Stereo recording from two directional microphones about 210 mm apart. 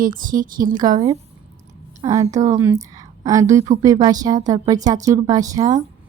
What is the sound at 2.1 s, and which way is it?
A woman's voice, 15° right (ahead or behind).